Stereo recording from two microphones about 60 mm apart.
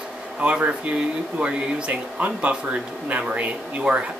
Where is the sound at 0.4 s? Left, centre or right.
Centre.